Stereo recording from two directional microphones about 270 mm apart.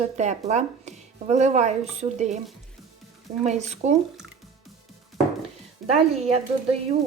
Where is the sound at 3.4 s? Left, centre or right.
Right.